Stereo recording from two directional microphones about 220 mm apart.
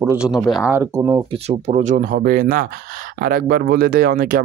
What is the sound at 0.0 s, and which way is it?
Speech, 5° right (ahead or behind).